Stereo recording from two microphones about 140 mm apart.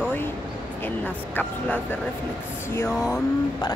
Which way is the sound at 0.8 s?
10° left (ahead or behind).